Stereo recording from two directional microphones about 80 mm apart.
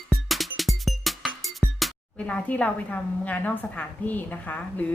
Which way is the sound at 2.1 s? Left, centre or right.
Centre.